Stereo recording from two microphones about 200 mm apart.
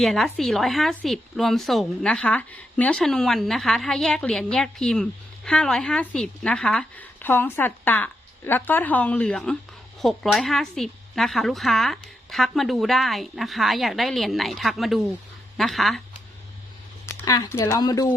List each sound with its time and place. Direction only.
0.0 s a woman's voice: centre (ahead or behind)
17.2 s a woman's voice: 20° left (ahead or behind)